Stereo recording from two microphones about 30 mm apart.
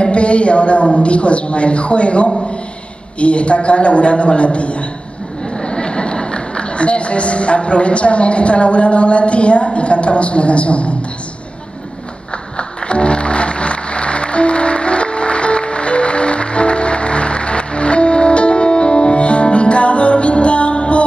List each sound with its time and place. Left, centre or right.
0.0 s a woman's voice: left
5.6 s a man's voice: left
12.5 s music: left